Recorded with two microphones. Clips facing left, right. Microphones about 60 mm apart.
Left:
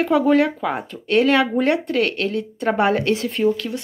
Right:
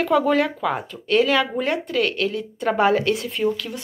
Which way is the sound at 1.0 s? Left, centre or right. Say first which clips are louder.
Left 2 dB; left.